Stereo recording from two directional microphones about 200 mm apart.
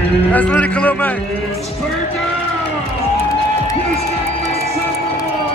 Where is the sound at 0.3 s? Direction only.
5° left (ahead or behind).